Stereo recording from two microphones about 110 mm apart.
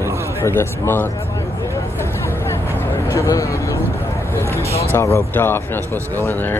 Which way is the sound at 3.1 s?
30° left (ahead or behind).